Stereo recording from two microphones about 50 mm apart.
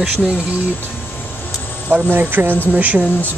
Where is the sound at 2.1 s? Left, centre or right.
Right.